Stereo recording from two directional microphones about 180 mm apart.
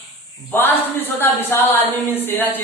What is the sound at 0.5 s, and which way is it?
Speech, 10° left (ahead or behind).